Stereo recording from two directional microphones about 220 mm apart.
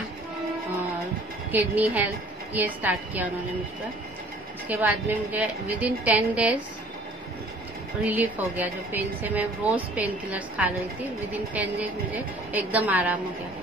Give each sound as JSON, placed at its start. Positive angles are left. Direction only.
{"t": 1.5, "sound": "a woman's voice", "side_deg": -10}
{"t": 4.6, "sound": "a woman's voice", "side_deg": -5}
{"t": 8.0, "sound": "a woman's voice", "side_deg": -5}